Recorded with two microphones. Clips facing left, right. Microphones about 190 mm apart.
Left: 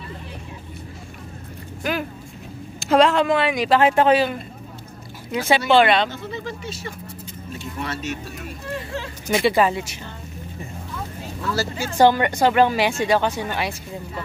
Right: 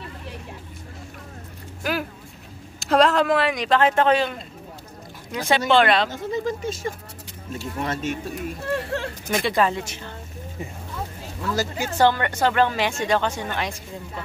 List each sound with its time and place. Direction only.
1.8 s vehicle: 5° right (ahead or behind)
2.8 s speech: centre (ahead or behind)
5.7 s speech: centre (ahead or behind)
6.0 s speech: 45° right (ahead or behind)
8.7 s speech: 65° right (ahead or behind)
9.3 s a woman's voice: 5° left (ahead or behind)
11.5 s a woman's voice: 15° right (ahead or behind)
12.0 s a woman's voice: 15° left (ahead or behind)